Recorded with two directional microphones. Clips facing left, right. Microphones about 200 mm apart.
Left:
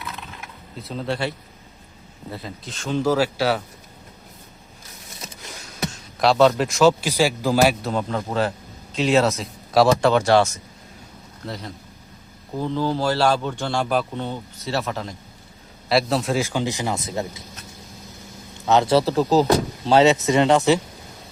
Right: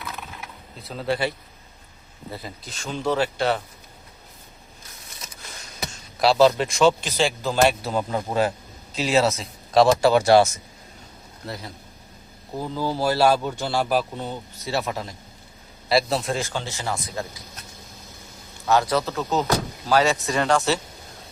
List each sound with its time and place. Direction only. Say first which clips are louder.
0.8 s speech: right 1 dB; centre (ahead or behind)
2.3 s speech: left 2 dB; centre (ahead or behind)
5.8 s a man's voice: left 1 dB; centre (ahead or behind); by 17.4 s 25° left (ahead or behind)
18.6 s speech: left 4 dB; 20° left (ahead or behind)
19.9 s speech: left 5 dB; 25° left (ahead or behind)